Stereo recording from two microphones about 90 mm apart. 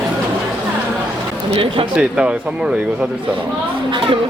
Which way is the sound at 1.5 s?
90° right.